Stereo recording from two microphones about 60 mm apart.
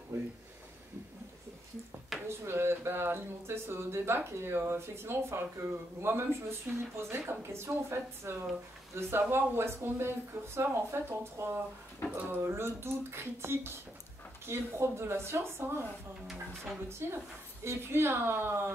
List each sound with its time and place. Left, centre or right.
2.2 s speech: right
12.2 s speech: right
12.4 s speech: right
17.0 s speech: right